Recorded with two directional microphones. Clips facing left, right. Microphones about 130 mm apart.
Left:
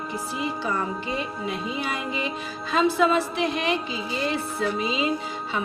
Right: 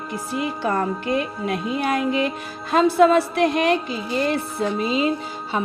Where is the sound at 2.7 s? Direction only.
50° right (ahead or behind).